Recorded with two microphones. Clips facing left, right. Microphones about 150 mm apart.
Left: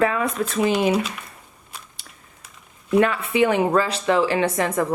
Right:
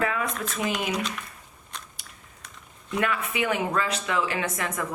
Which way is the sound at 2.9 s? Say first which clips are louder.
Left 9 dB; 30° left (ahead or behind).